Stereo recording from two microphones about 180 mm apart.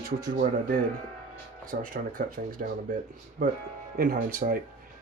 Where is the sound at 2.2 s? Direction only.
50° right (ahead or behind).